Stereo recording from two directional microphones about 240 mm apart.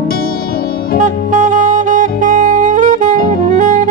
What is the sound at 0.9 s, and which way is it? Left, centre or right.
Saxophone, right.